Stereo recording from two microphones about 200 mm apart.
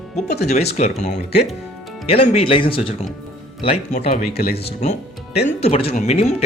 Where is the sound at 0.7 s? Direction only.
35° left (ahead or behind).